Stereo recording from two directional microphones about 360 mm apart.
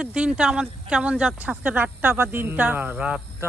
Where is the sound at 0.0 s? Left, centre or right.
Centre.